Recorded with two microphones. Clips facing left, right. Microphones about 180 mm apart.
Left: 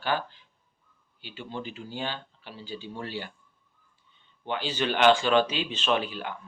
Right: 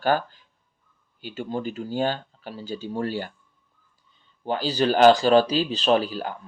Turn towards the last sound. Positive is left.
turn(degrees=-40)  # may be behind; listen again after turning